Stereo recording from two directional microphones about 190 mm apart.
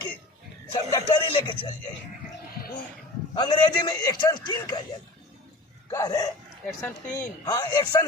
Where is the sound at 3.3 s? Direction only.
20° left (ahead or behind).